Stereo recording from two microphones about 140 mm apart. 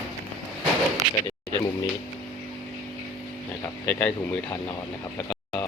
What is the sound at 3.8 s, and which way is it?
Speech, 10° left (ahead or behind).